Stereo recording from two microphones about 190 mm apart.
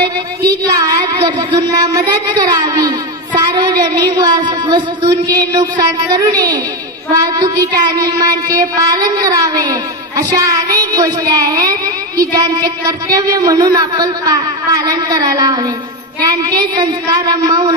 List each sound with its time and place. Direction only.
0.7 s child singing: 20° right (ahead or behind)